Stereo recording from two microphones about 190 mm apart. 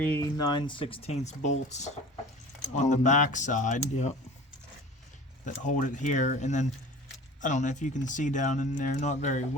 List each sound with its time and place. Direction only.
0.0 s speech: 10° left (ahead or behind); by 4.1 s 40° left (ahead or behind)
5.5 s speech: 40° left (ahead or behind)